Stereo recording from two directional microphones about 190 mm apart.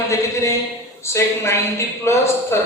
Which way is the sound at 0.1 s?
15° left (ahead or behind).